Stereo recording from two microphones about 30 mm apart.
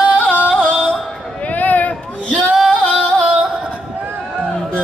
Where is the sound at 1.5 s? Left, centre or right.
Left.